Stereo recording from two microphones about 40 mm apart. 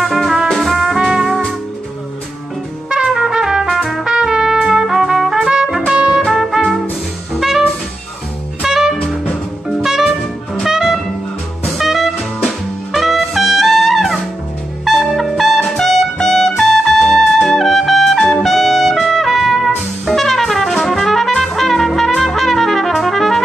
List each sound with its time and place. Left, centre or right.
0.1 s music: centre
0.8 s music: centre
3.1 s trumpet: centre
3.6 s trumpet: centre
4.0 s trumpet: centre
5.9 s music: centre
6.3 s music: centre
8.6 s music: centre
9.8 s jazz: centre
10.7 s music: centre
14.9 s brass instrument: centre
20.8 s trumpet: centre